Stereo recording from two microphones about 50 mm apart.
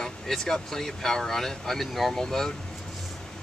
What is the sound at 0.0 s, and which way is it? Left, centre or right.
Speech, centre.